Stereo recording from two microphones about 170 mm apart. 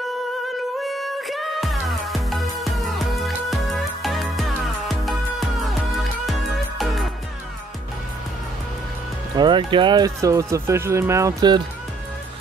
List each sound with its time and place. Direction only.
0.7 s music: centre (ahead or behind)
9.4 s speech: 30° right (ahead or behind)